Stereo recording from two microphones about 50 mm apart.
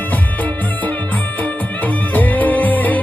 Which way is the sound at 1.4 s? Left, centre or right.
Left.